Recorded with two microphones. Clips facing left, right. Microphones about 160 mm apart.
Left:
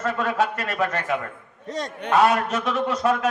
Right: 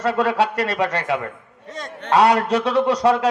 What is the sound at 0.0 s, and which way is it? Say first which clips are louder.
A man's voice: right 4 dB; 75° right (ahead or behind).